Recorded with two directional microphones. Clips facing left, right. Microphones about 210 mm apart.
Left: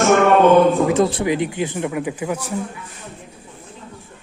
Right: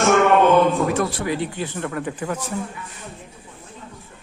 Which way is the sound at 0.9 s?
20° left (ahead or behind).